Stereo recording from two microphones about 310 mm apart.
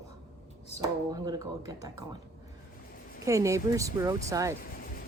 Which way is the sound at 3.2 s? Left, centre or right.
Centre.